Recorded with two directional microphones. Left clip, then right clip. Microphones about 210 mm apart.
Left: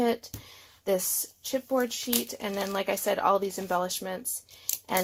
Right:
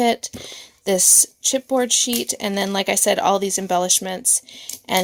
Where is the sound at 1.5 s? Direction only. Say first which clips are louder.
Right 8 dB; 45° right (ahead or behind).